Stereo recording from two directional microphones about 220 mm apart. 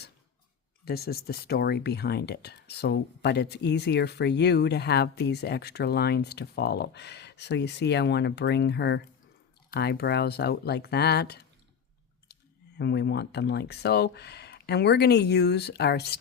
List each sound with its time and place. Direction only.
0.9 s speech: 45° left (ahead or behind)